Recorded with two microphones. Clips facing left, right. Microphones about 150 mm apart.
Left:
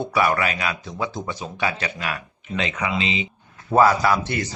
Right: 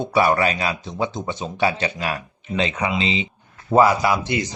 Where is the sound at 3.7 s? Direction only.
15° right (ahead or behind).